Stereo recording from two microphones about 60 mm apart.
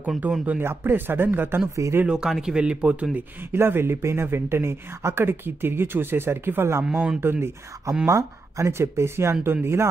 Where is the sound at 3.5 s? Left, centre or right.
Right.